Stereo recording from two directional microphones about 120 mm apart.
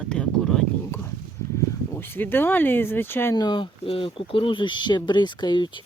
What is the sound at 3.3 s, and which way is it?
Speech, 40° left (ahead or behind).